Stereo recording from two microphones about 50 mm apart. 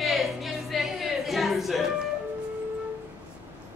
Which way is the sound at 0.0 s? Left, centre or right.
Centre.